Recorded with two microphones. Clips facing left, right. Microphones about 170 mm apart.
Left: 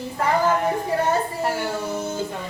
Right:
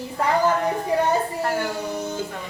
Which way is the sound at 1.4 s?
15° left (ahead or behind).